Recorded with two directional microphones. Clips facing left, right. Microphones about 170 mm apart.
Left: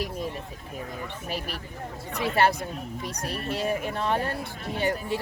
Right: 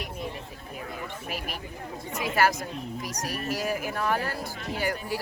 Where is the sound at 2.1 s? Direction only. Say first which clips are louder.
Left 2 dB; 30° left (ahead or behind).